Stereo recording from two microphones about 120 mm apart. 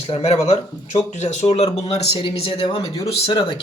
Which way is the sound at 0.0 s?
60° left (ahead or behind).